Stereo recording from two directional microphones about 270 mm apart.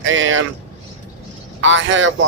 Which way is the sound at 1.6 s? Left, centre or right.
Right.